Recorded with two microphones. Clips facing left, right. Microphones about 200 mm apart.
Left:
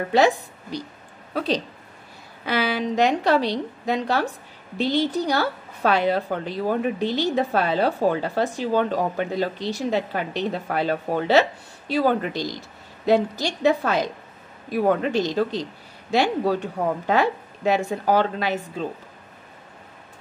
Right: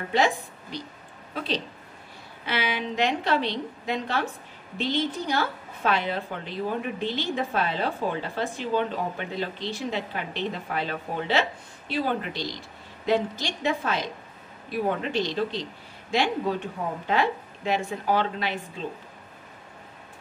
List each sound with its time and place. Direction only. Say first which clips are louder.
0.1 s a woman's voice: left 5 dB; 40° left (ahead or behind)
15.0 s speech: left 5 dB; 40° left (ahead or behind)